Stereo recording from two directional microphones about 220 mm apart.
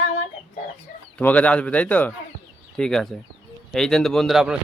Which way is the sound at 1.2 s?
5° left (ahead or behind).